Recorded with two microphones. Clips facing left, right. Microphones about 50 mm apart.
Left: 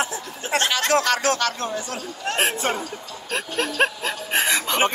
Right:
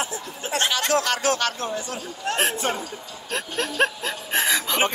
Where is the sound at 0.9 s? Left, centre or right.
Left.